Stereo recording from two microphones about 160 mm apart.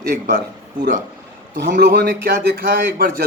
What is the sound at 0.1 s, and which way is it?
Speech, 90° right.